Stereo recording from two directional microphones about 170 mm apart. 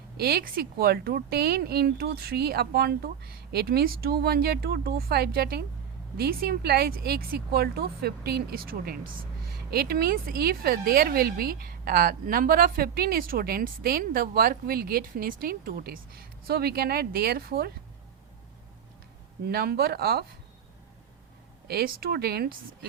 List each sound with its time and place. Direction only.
0.2 s speech: 65° right (ahead or behind)
19.5 s speech: 65° right (ahead or behind)
21.7 s speech: 65° right (ahead or behind)